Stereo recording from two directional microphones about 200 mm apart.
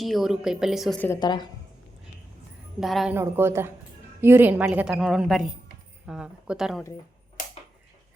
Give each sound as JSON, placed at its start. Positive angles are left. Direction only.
{"t": 0.0, "sound": "a woman's voice", "side_deg": 0}
{"t": 1.2, "sound": "a woman's voice", "side_deg": 20}
{"t": 2.8, "sound": "a woman's voice", "side_deg": 0}
{"t": 3.2, "sound": "a woman's voice", "side_deg": -10}